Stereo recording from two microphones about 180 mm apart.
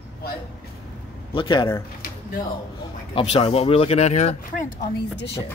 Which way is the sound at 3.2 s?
30° left (ahead or behind).